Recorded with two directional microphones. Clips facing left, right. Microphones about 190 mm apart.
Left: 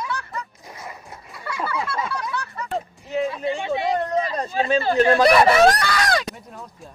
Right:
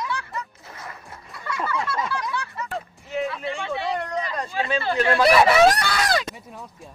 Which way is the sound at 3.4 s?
20° left (ahead or behind).